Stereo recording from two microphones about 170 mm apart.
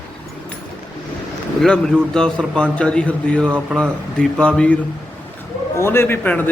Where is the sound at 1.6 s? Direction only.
5° left (ahead or behind).